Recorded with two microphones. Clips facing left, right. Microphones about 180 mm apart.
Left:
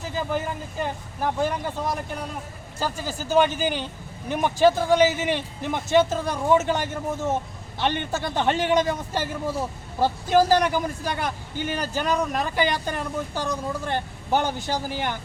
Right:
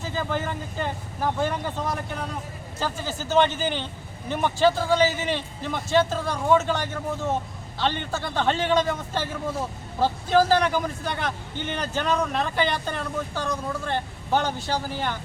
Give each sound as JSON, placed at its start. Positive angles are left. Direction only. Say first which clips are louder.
{"t": 0.2, "sound": "a man's voice", "louder": "left 1 dB", "side_deg": 10}
{"t": 7.8, "sound": "a man's voice", "louder": "left 1 dB", "side_deg": 15}